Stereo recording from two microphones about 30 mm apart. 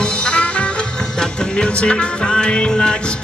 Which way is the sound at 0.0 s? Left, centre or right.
Left.